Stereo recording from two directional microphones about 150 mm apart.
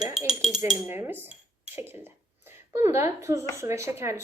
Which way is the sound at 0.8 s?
15° right (ahead or behind).